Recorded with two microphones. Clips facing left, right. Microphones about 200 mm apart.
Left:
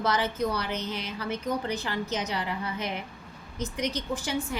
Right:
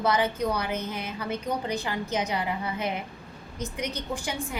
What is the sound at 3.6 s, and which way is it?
Speech, 10° right (ahead or behind).